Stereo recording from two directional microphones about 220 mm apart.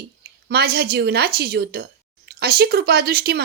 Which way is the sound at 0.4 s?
45° right (ahead or behind).